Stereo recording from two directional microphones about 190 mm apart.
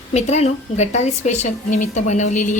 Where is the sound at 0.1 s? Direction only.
35° left (ahead or behind).